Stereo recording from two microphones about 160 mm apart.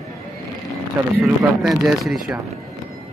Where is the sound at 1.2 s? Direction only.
5° right (ahead or behind).